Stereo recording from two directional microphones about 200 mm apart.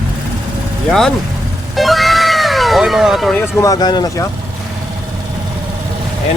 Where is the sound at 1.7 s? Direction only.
Centre (ahead or behind).